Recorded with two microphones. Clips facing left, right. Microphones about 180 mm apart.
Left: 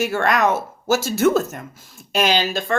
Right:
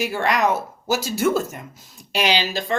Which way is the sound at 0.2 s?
50° left (ahead or behind).